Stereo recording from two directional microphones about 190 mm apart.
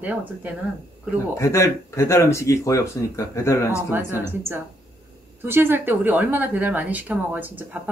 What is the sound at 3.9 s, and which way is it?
A woman's voice, 10° right (ahead or behind).